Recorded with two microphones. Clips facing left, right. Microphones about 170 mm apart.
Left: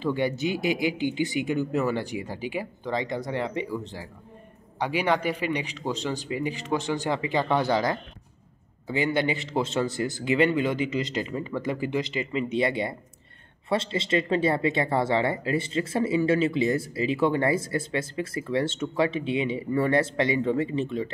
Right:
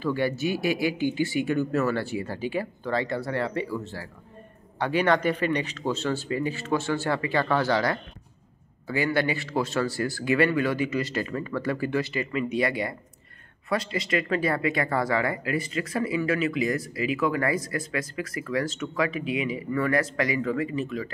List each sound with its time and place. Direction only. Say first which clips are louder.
0.0 s speech: even; 20° left (ahead or behind)